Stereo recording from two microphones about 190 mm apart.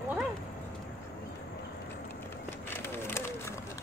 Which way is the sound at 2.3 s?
10° left (ahead or behind).